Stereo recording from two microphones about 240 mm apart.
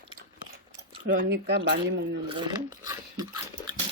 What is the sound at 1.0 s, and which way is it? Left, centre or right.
Speech, right.